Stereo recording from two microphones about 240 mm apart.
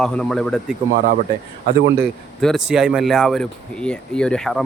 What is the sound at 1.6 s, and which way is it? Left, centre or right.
Speech, right.